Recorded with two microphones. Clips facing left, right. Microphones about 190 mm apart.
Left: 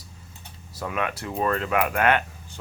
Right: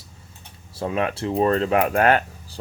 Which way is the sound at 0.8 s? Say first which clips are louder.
Right 5 dB; 30° right (ahead or behind).